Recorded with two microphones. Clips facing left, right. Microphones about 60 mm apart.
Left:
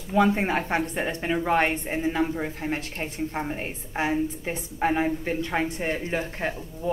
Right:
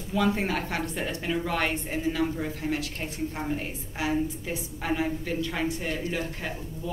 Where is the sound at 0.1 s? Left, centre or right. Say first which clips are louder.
Left 4 dB; left.